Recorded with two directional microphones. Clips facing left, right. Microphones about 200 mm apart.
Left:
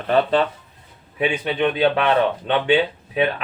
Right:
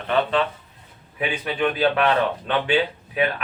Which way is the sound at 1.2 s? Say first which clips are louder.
Left 3 dB; 25° left (ahead or behind).